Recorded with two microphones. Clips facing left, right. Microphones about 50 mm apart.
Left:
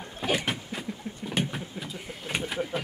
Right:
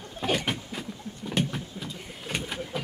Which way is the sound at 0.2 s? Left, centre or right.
Centre.